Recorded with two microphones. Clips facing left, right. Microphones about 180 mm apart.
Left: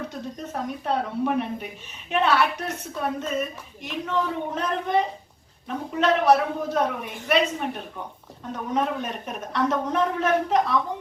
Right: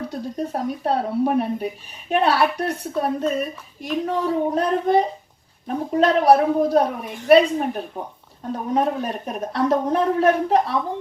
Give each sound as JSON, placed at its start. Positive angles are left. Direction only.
{"t": 0.1, "sound": "speech", "side_deg": -35}